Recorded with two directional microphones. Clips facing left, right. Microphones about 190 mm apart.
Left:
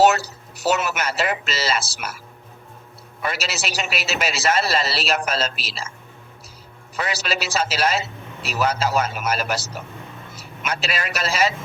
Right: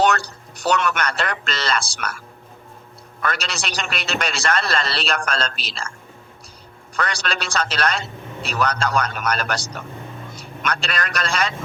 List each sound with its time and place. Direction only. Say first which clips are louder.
0.0 s a man's voice: left 3 dB; 5° left (ahead or behind)
3.3 s a man's voice: left 1 dB; 5° left (ahead or behind)
6.9 s a man's voice: even; 5° left (ahead or behind)